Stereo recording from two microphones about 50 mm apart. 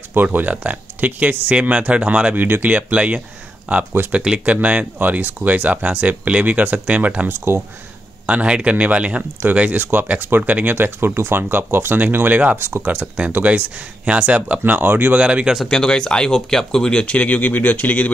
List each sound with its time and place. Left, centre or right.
0.1 s speech: right
2.3 s speech: right
2.7 s speech: right
7.2 s speech: right
8.3 s speech: right
9.8 s speech: right
12.5 s speech: right
12.8 s speech: right
14.6 s speech: right
15.1 s speech: right
15.7 s speech: centre
17.0 s speech: left